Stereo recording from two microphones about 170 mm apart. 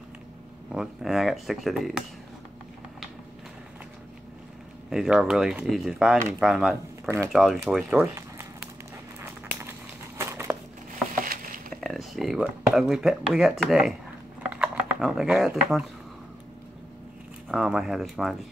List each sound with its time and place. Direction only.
0.7 s speech: 5° right (ahead or behind)
4.8 s speech: 5° right (ahead or behind)
9.2 s a sound: 15° right (ahead or behind)
11.1 s a sound: 55° right (ahead or behind)
11.7 s speech: centre (ahead or behind)
17.5 s speech: 5° right (ahead or behind)